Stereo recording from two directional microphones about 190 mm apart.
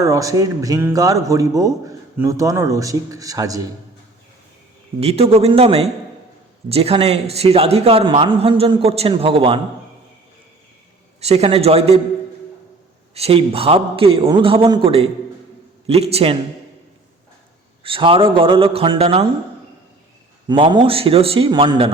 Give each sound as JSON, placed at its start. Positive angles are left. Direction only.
{"t": 0.0, "sound": "speech", "side_deg": -15}
{"t": 4.9, "sound": "a man's voice", "side_deg": -35}
{"t": 11.2, "sound": "a man's voice", "side_deg": -35}
{"t": 13.1, "sound": "a man's voice", "side_deg": -30}
{"t": 17.8, "sound": "a man's voice", "side_deg": -30}
{"t": 20.5, "sound": "a man's voice", "side_deg": -25}